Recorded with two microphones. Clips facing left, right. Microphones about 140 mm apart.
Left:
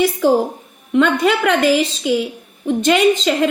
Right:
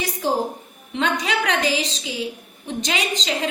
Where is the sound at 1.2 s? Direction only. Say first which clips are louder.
Left 8 dB; 55° left (ahead or behind).